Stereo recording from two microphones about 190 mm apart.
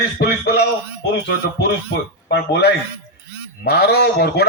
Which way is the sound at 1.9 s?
60° left (ahead or behind).